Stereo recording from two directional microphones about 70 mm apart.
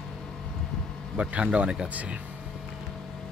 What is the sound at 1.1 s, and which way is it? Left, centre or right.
Speech, centre.